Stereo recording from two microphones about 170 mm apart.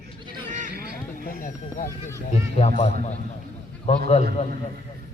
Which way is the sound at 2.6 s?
40° left (ahead or behind).